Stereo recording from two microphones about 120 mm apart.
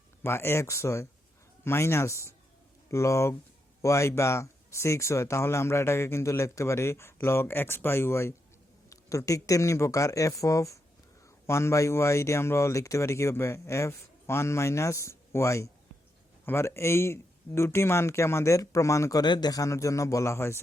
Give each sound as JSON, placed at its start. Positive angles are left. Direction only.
{"t": 0.2, "sound": "speech", "side_deg": 20}
{"t": 19.2, "sound": "speech", "side_deg": 35}